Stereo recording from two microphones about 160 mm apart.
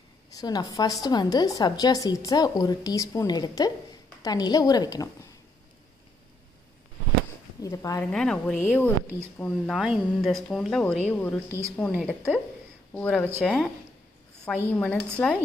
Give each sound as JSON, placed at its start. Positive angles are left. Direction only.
{"t": 0.3, "sound": "a woman's voice", "side_deg": 25}
{"t": 7.6, "sound": "a woman's voice", "side_deg": 20}
{"t": 8.0, "sound": "speech", "side_deg": 5}
{"t": 9.8, "sound": "speech", "side_deg": -5}